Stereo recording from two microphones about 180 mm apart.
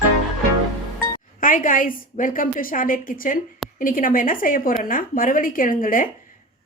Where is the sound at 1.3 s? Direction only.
50° left (ahead or behind).